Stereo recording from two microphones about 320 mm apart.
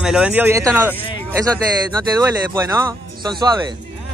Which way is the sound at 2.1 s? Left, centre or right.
Centre.